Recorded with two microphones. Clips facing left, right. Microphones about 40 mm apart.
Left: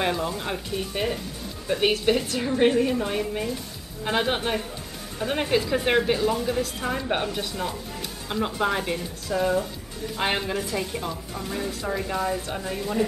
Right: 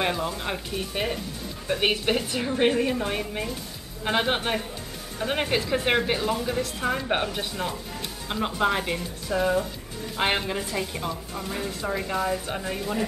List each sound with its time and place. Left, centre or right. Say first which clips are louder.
0.0 s speech: left 1 dB; centre
6.3 s speech: left 2 dB; centre